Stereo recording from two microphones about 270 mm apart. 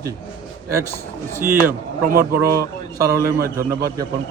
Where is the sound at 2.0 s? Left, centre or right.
Right.